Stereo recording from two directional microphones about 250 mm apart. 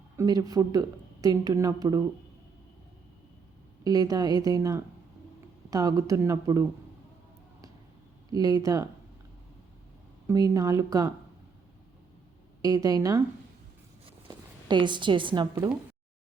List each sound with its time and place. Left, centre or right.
0.2 s speech: centre
3.8 s speech: centre
8.3 s speech: centre
10.2 s speech: centre
12.6 s speech: centre
14.3 s speech: centre